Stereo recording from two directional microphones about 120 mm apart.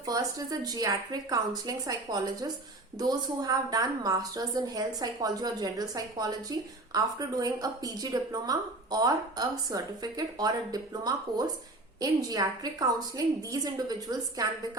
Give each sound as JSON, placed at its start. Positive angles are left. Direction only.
{"t": 0.0, "sound": "a woman's voice", "side_deg": -30}